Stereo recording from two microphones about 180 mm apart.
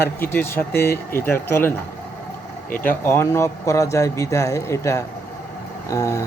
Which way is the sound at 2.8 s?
15° left (ahead or behind).